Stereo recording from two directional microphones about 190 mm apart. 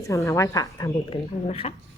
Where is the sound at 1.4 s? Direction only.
30° left (ahead or behind).